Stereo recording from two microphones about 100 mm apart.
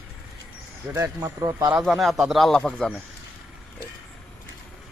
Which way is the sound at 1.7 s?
Centre (ahead or behind).